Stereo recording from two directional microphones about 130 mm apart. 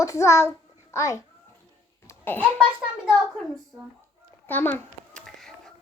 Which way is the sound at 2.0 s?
15° left (ahead or behind).